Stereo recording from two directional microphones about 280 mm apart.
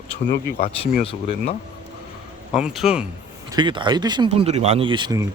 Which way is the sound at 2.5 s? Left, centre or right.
Centre.